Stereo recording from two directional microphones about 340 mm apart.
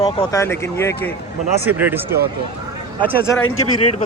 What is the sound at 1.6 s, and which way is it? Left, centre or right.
Speech, centre.